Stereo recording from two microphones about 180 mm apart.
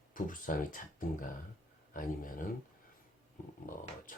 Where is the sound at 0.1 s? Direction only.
50° left (ahead or behind).